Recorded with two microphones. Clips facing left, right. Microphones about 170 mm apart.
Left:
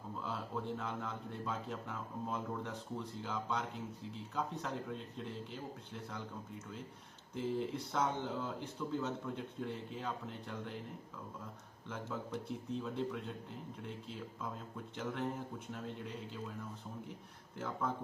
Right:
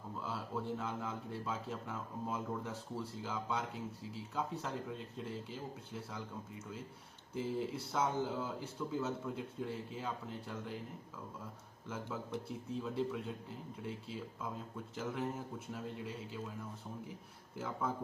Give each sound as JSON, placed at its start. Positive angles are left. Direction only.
{"t": 0.2, "sound": "a man's voice", "side_deg": -5}
{"t": 11.9, "sound": "a man's voice", "side_deg": -5}
{"t": 17.6, "sound": "a man's voice", "side_deg": -5}